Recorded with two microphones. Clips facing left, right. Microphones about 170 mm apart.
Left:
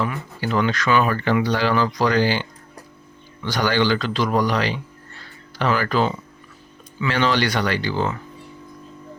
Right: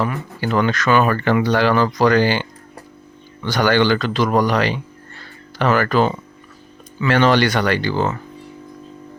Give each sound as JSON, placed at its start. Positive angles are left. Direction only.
{"t": 0.0, "sound": "speech", "side_deg": -55}